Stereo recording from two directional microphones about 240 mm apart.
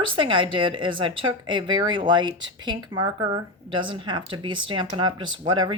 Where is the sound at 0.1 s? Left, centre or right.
Right.